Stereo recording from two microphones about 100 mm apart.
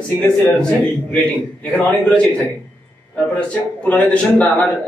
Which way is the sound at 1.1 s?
15° left (ahead or behind).